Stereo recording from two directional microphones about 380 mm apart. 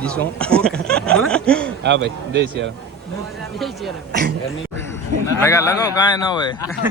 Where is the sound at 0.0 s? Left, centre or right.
Centre.